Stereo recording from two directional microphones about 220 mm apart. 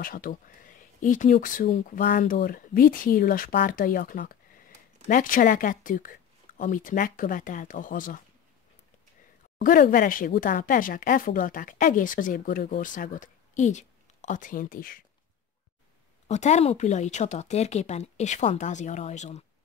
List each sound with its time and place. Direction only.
0.0 s speech: 40° left (ahead or behind)
9.6 s speech: 40° left (ahead or behind)
16.3 s speech: 30° left (ahead or behind)